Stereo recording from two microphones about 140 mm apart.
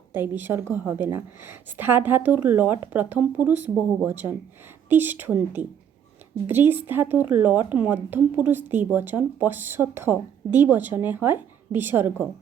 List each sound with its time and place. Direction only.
0.1 s a woman's voice: 15° right (ahead or behind)